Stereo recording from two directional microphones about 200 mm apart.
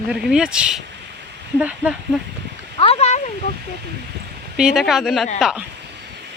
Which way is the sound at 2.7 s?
30° left (ahead or behind).